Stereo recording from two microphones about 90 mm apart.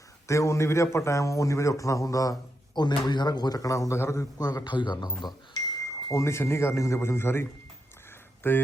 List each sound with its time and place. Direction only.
0.3 s a man's voice: 35° left (ahead or behind)
4.4 s speech: 50° left (ahead or behind)
5.8 s a man's voice: 35° left (ahead or behind)
8.4 s speech: 25° left (ahead or behind)